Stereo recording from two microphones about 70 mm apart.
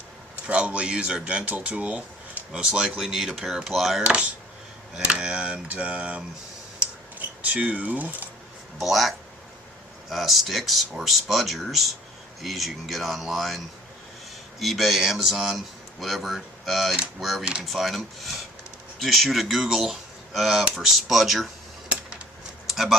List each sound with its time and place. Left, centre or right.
0.4 s speech: centre
2.5 s speech: centre
4.0 s speech: centre
7.4 s speech: centre
8.8 s a man's voice: centre
14.6 s a man's voice: centre
22.7 s speech: centre